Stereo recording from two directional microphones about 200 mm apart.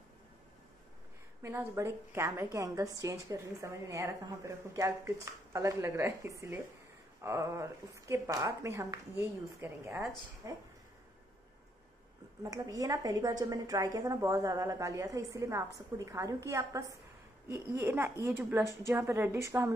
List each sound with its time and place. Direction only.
1.4 s a woman's voice: 15° right (ahead or behind)
12.4 s a woman's voice: 15° right (ahead or behind)